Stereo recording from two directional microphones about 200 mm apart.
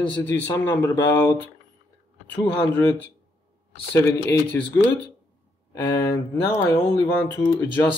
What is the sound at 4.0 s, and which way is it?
Speech, 15° left (ahead or behind).